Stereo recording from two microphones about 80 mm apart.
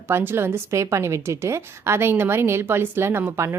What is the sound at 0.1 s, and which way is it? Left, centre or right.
Speech, right.